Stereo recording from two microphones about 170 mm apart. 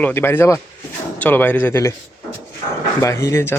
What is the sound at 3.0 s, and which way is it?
Speech, 15° left (ahead or behind).